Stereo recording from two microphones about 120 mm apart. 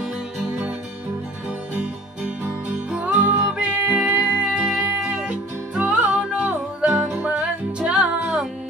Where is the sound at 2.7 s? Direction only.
10° right (ahead or behind).